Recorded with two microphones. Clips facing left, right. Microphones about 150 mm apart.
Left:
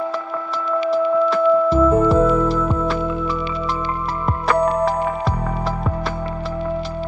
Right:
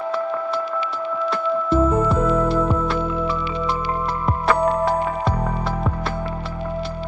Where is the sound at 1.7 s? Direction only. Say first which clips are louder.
Left 4 dB; 35° left (ahead or behind).